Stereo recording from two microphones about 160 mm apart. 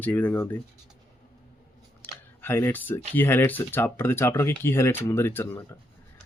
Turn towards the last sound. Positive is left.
turn(degrees=15)  # may be behind; listen again after turning